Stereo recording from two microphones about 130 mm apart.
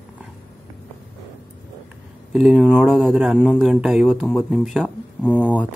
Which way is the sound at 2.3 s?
5° right (ahead or behind).